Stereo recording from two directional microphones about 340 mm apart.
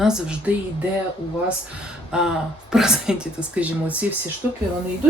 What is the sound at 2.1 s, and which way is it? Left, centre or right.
Speech, centre.